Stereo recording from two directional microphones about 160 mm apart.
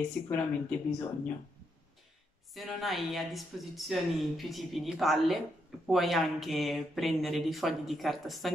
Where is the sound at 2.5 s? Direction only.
Centre (ahead or behind).